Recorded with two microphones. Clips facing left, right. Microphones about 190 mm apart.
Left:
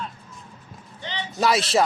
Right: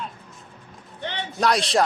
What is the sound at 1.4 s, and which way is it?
Speech, 5° left (ahead or behind).